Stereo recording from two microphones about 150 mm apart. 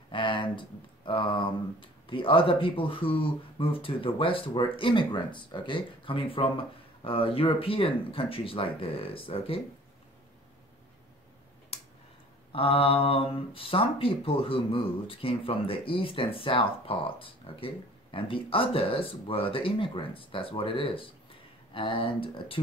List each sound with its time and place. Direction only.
0.1 s speech: 35° left (ahead or behind)
12.5 s speech: 40° left (ahead or behind)